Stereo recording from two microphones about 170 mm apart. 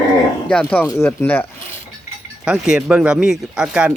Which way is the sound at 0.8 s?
15° left (ahead or behind).